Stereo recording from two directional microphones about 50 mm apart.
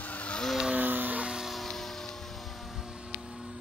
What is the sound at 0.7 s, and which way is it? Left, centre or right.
Music, right.